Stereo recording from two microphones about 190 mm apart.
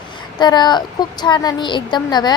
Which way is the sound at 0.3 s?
20° left (ahead or behind).